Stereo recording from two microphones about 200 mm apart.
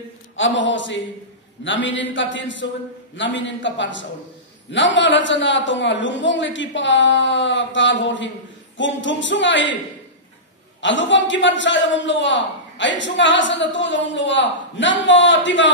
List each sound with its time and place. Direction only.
0.4 s a man's voice: 65° left (ahead or behind)
10.8 s a man's voice: 65° left (ahead or behind)